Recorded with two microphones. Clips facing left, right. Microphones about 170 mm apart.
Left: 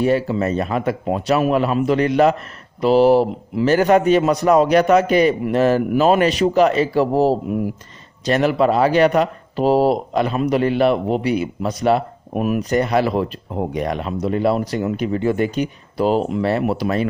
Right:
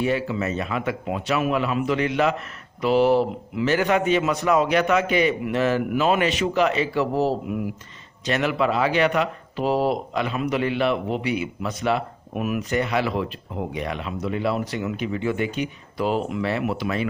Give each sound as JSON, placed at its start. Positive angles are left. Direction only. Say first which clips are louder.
{"t": 0.0, "sound": "speech", "louder": "left 6 dB", "side_deg": 40}